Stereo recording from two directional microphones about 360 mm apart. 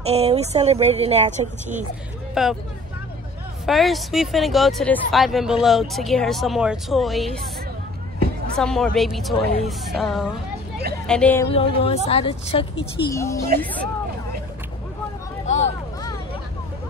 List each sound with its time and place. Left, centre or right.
0.0 s speech: centre
2.4 s speech: centre
3.6 s speech: centre
8.5 s speech: centre
11.4 s a woman's voice: centre
15.4 s a sound: centre